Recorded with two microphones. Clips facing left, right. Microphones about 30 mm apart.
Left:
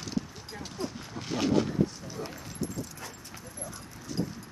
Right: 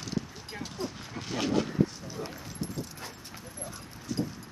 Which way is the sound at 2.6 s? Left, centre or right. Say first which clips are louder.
Left 2 dB; right.